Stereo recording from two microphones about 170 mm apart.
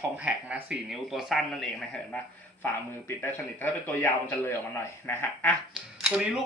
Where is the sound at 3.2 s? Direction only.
10° left (ahead or behind).